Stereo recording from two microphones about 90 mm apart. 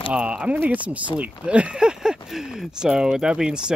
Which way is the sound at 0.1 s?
10° right (ahead or behind).